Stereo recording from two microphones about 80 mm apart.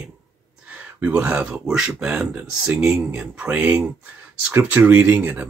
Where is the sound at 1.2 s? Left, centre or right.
Centre.